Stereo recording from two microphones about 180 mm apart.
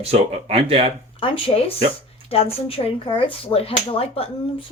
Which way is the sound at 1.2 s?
30° left (ahead or behind).